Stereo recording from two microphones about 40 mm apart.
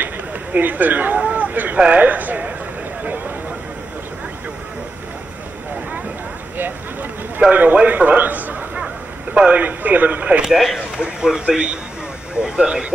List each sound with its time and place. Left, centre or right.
0.0 s a sound: right
1.8 s speech: right
6.6 s a sound: right
7.5 s speech: right
9.3 s speech: right
9.6 s speech: right
11.0 s speech: centre